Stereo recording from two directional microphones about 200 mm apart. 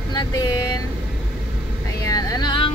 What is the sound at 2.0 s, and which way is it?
Speech, 20° left (ahead or behind).